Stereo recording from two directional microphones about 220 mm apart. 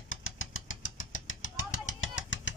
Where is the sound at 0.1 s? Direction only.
65° left (ahead or behind).